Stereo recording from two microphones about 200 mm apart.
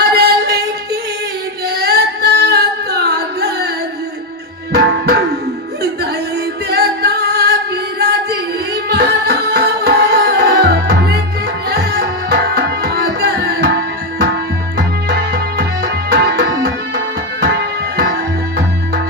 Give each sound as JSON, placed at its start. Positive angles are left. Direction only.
{"t": 0.0, "sound": "music", "side_deg": -55}
{"t": 1.6, "sound": "singing", "side_deg": -55}
{"t": 6.7, "sound": "music", "side_deg": -55}
{"t": 15.1, "sound": "music", "side_deg": -50}